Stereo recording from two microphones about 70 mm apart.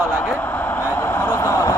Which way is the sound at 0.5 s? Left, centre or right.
Left.